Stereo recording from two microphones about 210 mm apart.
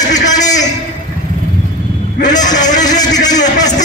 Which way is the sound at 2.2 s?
20° left (ahead or behind).